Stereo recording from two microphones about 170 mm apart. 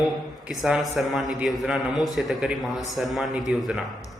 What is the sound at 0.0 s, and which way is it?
A man's voice, 5° right (ahead or behind).